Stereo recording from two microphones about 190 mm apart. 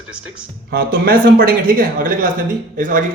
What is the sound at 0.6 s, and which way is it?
Speech, 55° right (ahead or behind).